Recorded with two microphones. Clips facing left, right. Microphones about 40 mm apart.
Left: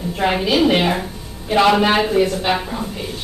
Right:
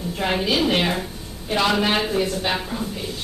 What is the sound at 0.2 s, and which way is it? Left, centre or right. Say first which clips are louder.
A woman's voice: left 5 dB; centre.